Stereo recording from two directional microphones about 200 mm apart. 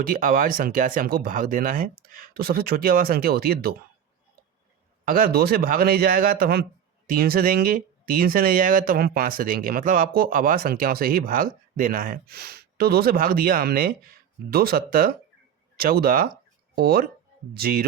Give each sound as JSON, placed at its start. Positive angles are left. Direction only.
{"t": 0.0, "sound": "speech", "side_deg": -45}
{"t": 5.0, "sound": "speech", "side_deg": -45}